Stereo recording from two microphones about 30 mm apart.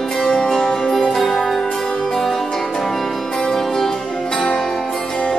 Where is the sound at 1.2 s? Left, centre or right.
Centre.